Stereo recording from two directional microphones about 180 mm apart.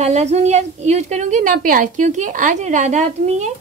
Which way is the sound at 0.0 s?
40° right (ahead or behind).